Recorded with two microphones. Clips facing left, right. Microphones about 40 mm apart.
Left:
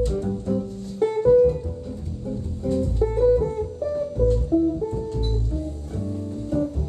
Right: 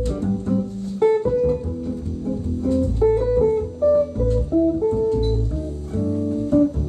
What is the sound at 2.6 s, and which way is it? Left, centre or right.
Music, centre.